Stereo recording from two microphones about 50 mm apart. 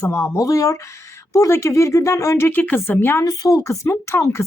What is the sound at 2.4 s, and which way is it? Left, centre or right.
Speech, left.